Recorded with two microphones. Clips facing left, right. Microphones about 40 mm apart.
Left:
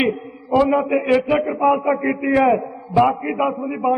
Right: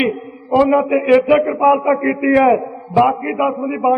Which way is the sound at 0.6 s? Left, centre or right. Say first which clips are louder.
Right 4 dB; centre.